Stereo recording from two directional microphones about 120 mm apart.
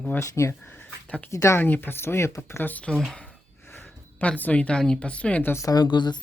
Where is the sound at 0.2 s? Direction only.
25° left (ahead or behind).